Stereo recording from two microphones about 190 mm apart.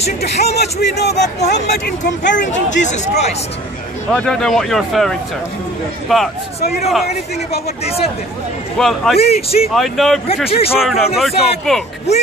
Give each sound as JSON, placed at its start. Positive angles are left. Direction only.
{"t": 0.2, "sound": "speech", "side_deg": 55}
{"t": 2.3, "sound": "speech", "side_deg": 40}
{"t": 4.1, "sound": "speech", "side_deg": 5}
{"t": 8.7, "sound": "speech", "side_deg": 0}
{"t": 9.1, "sound": "speech", "side_deg": 30}
{"t": 9.8, "sound": "speech", "side_deg": 0}
{"t": 10.5, "sound": "speech", "side_deg": 30}
{"t": 10.8, "sound": "speech", "side_deg": 0}